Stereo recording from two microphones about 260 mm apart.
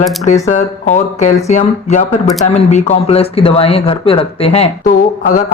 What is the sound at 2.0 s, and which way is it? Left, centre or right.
Speech, centre.